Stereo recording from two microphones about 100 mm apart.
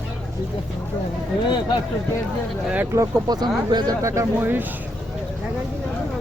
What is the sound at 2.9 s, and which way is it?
Speech, 40° right (ahead or behind).